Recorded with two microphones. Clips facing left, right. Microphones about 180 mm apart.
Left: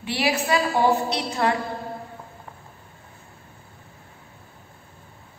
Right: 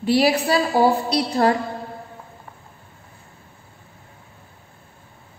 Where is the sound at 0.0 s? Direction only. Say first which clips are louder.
Right 7 dB; 40° right (ahead or behind).